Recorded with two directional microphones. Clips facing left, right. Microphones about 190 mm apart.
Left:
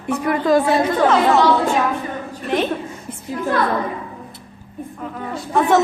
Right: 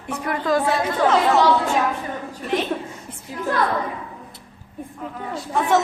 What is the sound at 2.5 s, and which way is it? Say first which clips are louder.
Speech: left 3 dB; 60° left (ahead or behind).